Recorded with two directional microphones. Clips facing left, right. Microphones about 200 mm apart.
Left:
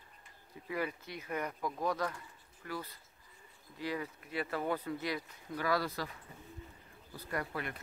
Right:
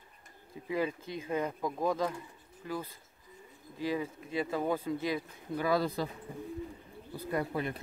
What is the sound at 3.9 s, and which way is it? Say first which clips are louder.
Speech: right 5 dB; 20° right (ahead or behind).